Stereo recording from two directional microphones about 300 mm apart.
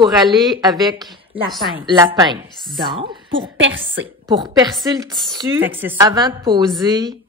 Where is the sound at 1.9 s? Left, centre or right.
Centre.